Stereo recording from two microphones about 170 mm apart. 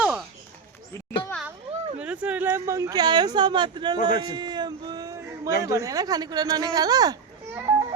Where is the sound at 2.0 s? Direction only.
5° right (ahead or behind); by 3.9 s 25° right (ahead or behind).